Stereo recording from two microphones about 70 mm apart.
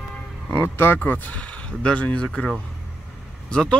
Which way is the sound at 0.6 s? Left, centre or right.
Left.